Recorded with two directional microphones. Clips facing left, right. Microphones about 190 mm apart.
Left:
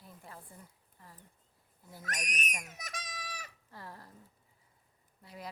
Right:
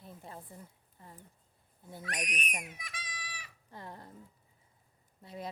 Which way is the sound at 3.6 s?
20° right (ahead or behind).